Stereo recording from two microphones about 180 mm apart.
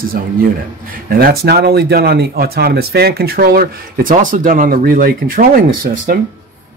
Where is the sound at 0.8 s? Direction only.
55° right (ahead or behind).